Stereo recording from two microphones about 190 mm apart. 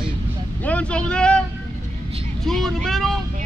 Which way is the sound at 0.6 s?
5° left (ahead or behind).